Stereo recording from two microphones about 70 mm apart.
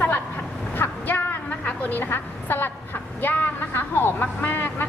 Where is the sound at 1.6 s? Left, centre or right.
Left.